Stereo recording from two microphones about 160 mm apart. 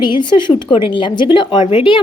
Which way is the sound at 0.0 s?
30° left (ahead or behind).